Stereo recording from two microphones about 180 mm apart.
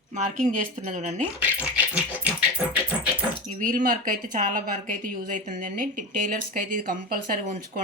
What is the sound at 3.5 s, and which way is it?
Speech, 50° right (ahead or behind).